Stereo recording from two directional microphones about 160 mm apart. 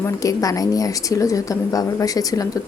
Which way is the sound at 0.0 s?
20° left (ahead or behind).